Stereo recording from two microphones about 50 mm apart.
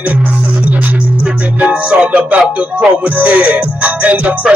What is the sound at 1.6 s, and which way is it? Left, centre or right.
Music, right.